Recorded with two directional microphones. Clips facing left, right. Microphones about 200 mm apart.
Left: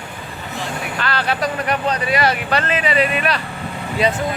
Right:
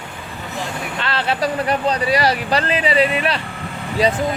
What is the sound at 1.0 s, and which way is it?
Speech, 25° right (ahead or behind).